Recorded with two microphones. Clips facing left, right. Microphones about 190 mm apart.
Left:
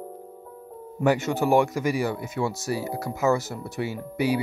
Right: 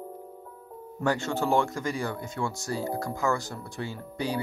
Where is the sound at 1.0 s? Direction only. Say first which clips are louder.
Left 5 dB; 20° left (ahead or behind).